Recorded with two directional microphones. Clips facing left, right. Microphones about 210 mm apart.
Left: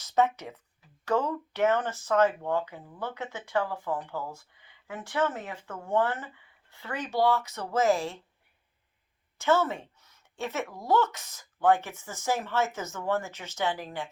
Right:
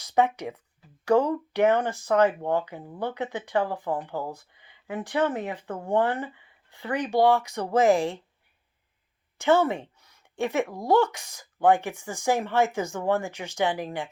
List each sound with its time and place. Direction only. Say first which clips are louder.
0.0 s speech: right 2 dB; 15° right (ahead or behind)
5.6 s speech: right 6 dB; 35° right (ahead or behind)
5.9 s speech: right 3 dB; 15° right (ahead or behind)
9.4 s speech: right 4 dB; 15° right (ahead or behind)